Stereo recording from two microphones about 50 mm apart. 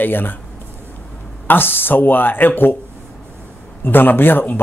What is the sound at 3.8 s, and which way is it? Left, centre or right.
Speech, left.